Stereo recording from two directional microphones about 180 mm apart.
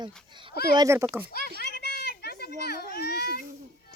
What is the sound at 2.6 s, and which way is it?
Speech, 60° left (ahead or behind).